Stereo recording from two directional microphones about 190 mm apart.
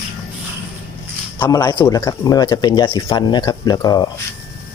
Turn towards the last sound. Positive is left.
turn(degrees=20)  # may be behind; listen again after turning